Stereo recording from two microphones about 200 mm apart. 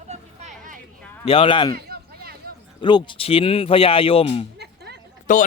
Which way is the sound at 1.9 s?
50° right (ahead or behind).